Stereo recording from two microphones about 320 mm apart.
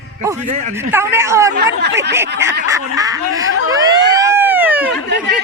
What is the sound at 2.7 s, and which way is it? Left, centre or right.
Speech, centre.